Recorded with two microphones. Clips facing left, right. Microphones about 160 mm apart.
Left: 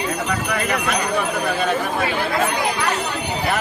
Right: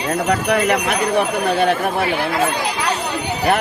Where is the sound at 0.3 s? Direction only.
60° right (ahead or behind).